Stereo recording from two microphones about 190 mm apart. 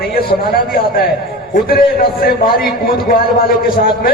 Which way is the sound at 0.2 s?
50° left (ahead or behind).